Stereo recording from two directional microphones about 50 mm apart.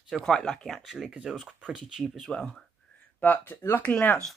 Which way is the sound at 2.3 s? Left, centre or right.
Centre.